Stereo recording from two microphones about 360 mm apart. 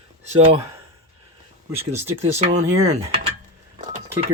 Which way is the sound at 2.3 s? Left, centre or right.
Centre.